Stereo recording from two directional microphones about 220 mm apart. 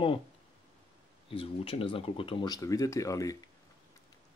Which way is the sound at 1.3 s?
25° left (ahead or behind).